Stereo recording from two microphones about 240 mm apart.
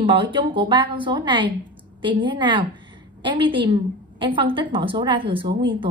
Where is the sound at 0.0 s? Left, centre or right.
Right.